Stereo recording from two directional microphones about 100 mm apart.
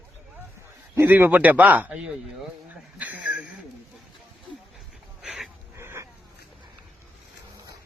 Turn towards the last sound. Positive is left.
turn(degrees=-25)  # may be behind; listen again after turning